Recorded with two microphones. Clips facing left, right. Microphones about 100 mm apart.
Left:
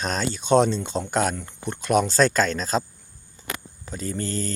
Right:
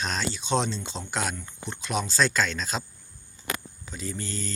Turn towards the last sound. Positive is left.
turn(degrees=45)  # may be behind; listen again after turning